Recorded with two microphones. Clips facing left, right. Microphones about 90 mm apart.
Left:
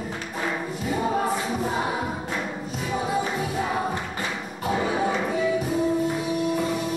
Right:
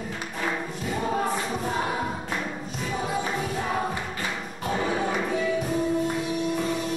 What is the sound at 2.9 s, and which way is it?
Music, 5° left (ahead or behind).